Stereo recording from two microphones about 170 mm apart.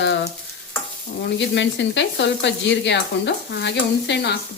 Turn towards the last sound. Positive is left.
turn(degrees=90)